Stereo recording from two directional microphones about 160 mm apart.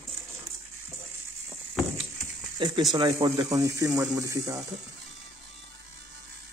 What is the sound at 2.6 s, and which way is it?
Speech, 25° right (ahead or behind).